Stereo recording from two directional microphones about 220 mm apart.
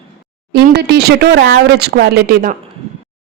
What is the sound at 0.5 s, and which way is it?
Speech, 50° right (ahead or behind).